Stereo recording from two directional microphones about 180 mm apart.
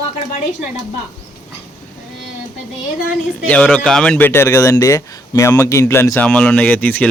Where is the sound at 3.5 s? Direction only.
5° left (ahead or behind).